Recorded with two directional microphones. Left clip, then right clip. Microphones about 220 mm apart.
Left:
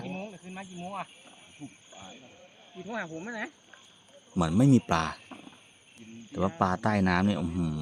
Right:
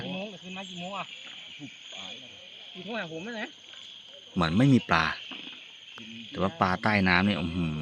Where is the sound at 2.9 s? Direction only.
35° right (ahead or behind).